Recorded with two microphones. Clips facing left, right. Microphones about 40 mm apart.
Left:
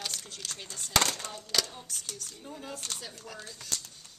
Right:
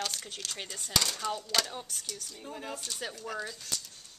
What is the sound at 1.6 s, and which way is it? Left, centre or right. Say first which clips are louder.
Speech: even; centre.